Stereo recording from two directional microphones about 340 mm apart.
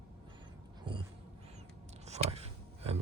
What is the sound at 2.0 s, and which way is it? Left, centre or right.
Vehicle, centre.